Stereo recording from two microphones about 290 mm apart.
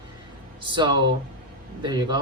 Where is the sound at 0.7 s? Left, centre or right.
Centre.